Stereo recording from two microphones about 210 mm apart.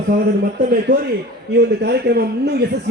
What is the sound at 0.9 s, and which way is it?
A man's voice, 45° right (ahead or behind).